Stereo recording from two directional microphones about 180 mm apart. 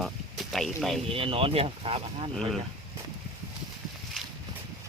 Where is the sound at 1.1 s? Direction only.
30° right (ahead or behind).